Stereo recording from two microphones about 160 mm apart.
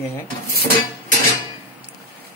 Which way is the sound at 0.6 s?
70° left (ahead or behind).